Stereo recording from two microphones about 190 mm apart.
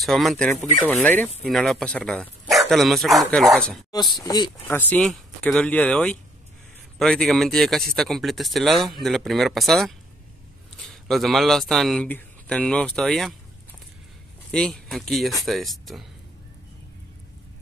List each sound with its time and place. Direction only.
0.0 s speech: centre (ahead or behind)
3.9 s speech: 20° left (ahead or behind)
4.6 s speech: 10° left (ahead or behind)
14.5 s speech: 5° left (ahead or behind)